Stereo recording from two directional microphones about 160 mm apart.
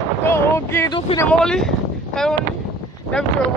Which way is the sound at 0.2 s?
15° left (ahead or behind).